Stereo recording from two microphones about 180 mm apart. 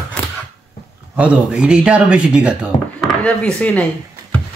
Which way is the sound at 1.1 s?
5° right (ahead or behind).